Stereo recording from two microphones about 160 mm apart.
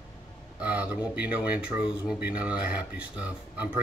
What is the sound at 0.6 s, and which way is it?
Speech, 10° right (ahead or behind).